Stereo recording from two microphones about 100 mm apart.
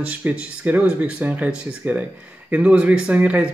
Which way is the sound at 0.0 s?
15° right (ahead or behind).